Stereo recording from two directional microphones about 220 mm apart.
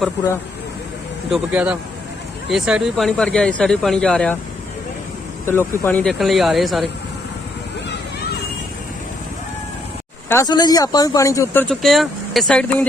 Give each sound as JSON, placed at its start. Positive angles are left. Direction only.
{"t": 1.3, "sound": "speech", "side_deg": -5}
{"t": 5.5, "sound": "speech", "side_deg": 10}
{"t": 10.2, "sound": "speech", "side_deg": 15}